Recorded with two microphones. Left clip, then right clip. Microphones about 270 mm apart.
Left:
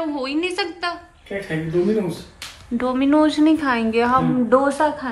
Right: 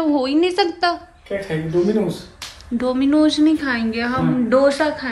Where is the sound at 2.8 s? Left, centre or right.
Centre.